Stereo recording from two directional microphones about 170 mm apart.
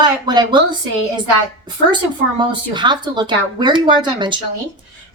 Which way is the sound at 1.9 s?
25° right (ahead or behind).